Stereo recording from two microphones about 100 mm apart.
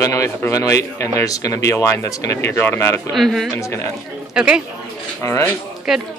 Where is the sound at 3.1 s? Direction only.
Centre (ahead or behind).